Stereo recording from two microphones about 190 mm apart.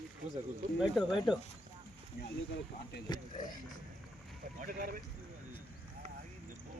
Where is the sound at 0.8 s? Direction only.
Centre (ahead or behind).